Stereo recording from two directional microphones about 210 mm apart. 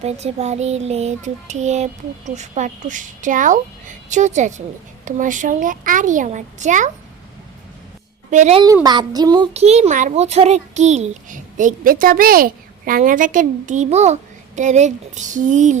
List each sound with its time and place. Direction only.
0.0 s a child's voice: 30° right (ahead or behind)
8.3 s a child's voice: 35° right (ahead or behind)
8.6 s a child's voice: 20° right (ahead or behind)
9.5 s a child's voice: 30° right (ahead or behind)